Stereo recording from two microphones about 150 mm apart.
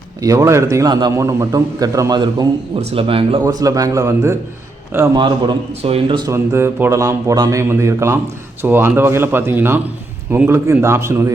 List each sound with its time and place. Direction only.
0.2 s a man's voice: 20° right (ahead or behind); by 3.4 s 35° right (ahead or behind)
3.4 s a man's voice: 25° right (ahead or behind)
5.1 s a man's voice: 30° right (ahead or behind)
6.3 s a man's voice: 15° right (ahead or behind)